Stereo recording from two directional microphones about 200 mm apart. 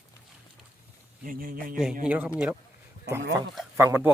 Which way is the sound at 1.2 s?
45° right (ahead or behind).